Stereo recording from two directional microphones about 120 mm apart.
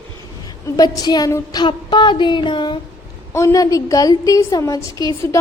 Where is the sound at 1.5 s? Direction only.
40° left (ahead or behind).